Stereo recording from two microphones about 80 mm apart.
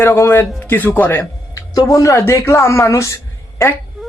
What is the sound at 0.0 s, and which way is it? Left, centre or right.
Speech, left.